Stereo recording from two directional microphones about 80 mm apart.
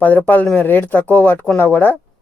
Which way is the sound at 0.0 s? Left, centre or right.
Left.